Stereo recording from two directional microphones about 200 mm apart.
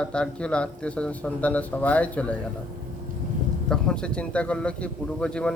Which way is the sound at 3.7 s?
5° left (ahead or behind).